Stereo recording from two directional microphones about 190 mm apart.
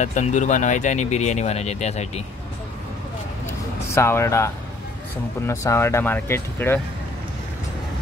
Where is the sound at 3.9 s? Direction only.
15° left (ahead or behind).